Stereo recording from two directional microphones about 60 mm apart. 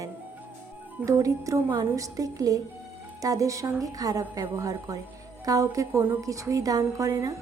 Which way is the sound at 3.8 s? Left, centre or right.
Right.